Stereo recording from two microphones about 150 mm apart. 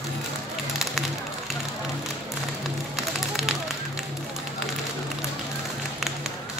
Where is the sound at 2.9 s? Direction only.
Centre (ahead or behind).